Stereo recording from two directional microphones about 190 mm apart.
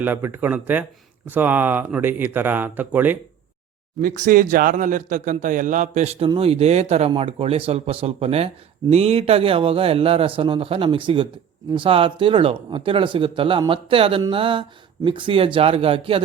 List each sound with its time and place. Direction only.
0.0 s speech: 10° right (ahead or behind)
4.0 s speech: 45° right (ahead or behind); by 16.2 s 30° right (ahead or behind)